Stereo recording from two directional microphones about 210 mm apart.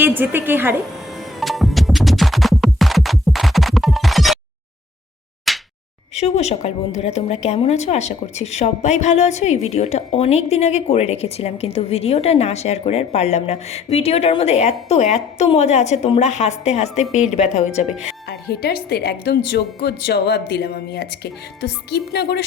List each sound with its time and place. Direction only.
0.0 s a woman's voice: 10° right (ahead or behind)
1.4 s music: centre (ahead or behind)
5.5 s slap: centre (ahead or behind)
6.1 s a woman's voice: 30° left (ahead or behind)
18.3 s speech: 50° left (ahead or behind)